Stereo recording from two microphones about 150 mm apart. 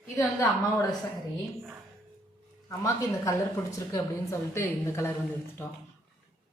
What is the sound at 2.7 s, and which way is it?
A woman's voice, 20° left (ahead or behind).